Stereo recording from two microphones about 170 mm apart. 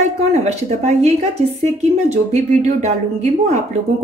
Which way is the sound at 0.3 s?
40° right (ahead or behind).